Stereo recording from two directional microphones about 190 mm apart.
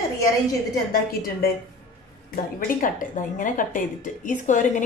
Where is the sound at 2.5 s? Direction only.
45° left (ahead or behind).